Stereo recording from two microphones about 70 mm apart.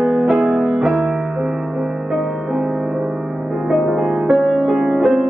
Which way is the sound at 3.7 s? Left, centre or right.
Centre.